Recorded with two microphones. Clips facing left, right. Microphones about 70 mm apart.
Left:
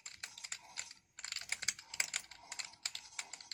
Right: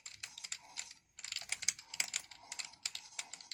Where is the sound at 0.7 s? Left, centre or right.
Left.